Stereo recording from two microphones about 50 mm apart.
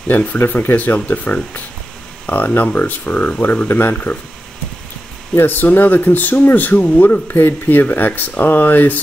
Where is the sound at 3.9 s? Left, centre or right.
Left.